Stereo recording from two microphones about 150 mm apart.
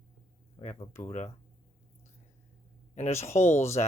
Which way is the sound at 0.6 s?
40° left (ahead or behind).